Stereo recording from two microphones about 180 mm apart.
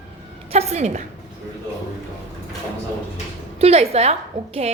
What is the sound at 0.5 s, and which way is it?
Speech, 35° right (ahead or behind).